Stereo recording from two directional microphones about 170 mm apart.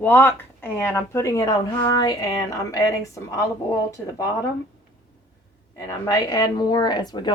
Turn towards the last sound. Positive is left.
turn(degrees=25)  # may be behind; listen again after turning